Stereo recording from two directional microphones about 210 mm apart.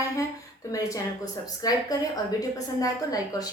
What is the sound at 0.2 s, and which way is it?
A woman's voice, 15° left (ahead or behind).